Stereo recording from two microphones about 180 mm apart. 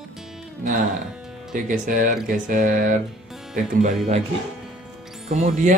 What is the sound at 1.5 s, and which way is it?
Speech, 50° right (ahead or behind).